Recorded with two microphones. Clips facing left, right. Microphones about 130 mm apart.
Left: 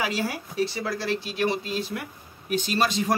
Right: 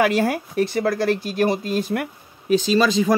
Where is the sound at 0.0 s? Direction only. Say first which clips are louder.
Right 9 dB; 55° right (ahead or behind).